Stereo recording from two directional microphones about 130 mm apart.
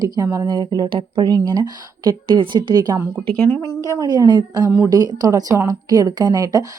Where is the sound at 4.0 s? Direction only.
30° right (ahead or behind).